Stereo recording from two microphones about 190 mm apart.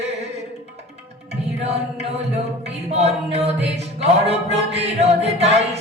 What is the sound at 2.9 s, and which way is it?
Speech, 35° right (ahead or behind).